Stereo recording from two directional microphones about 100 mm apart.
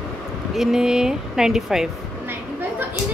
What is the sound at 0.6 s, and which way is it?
Speech, 5° right (ahead or behind).